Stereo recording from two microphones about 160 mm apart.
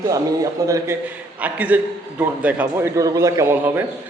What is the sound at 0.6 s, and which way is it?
Speech, 20° right (ahead or behind).